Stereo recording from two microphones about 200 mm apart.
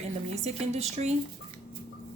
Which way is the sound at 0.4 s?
35° right (ahead or behind).